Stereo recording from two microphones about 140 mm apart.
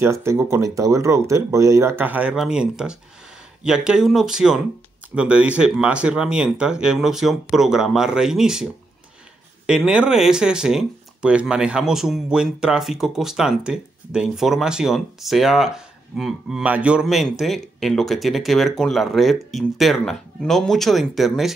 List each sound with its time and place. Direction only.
0.0 s speech: 20° right (ahead or behind); by 8.6 s 5° right (ahead or behind)
9.7 s speech: 5° right (ahead or behind)